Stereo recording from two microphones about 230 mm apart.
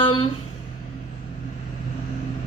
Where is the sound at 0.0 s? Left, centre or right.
Left.